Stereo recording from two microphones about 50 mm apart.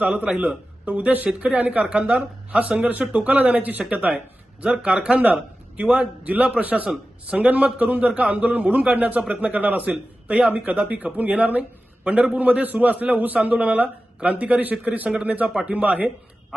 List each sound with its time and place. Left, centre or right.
0.1 s a man's voice: centre; by 16.0 s right